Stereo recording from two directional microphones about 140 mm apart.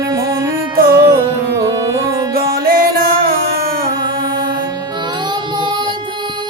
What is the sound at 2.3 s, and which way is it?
Music, 90° right.